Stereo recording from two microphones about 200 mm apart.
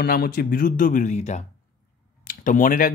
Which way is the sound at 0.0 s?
50° left (ahead or behind).